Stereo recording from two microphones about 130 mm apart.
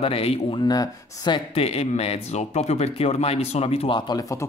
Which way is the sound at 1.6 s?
55° left (ahead or behind).